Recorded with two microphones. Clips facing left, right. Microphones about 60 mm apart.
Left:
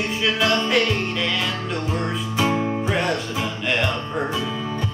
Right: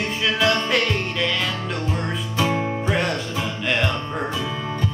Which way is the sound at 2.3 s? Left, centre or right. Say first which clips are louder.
Left 1 dB; centre.